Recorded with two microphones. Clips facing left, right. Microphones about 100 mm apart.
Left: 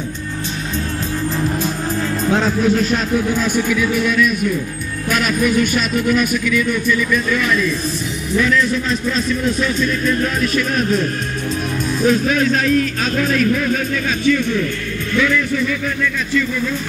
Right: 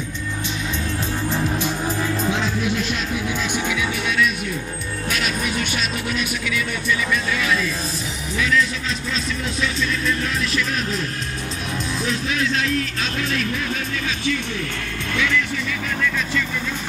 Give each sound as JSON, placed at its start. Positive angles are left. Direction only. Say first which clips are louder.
{"t": 2.3, "sound": "speech", "louder": "left 7 dB", "side_deg": 40}